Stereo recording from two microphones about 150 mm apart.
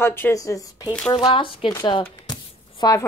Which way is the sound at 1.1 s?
35° left (ahead or behind).